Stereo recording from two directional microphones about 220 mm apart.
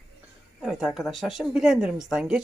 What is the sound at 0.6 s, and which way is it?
Speech, centre (ahead or behind).